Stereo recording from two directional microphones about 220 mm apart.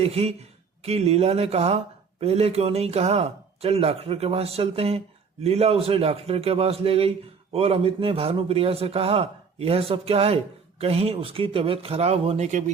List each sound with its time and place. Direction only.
0.0 s a man's voice: 30° right (ahead or behind)